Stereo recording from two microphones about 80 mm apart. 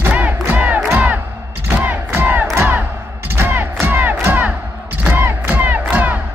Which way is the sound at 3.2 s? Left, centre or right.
Right.